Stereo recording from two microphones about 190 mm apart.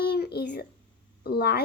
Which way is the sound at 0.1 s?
60° left (ahead or behind).